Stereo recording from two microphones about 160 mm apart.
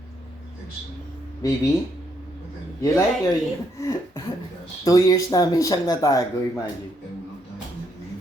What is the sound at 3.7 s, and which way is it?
Speech, 20° left (ahead or behind).